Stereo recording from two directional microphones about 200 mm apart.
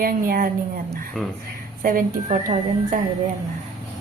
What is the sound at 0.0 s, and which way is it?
Speech, 45° right (ahead or behind).